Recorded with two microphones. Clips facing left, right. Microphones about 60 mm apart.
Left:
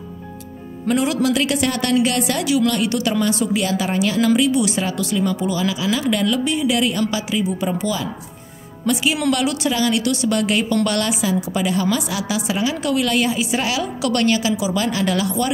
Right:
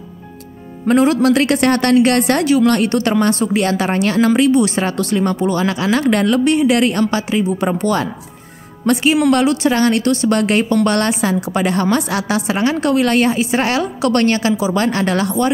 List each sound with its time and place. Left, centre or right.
0.8 s a woman's voice: right
6.4 s a woman's voice: right
9.3 s a woman's voice: right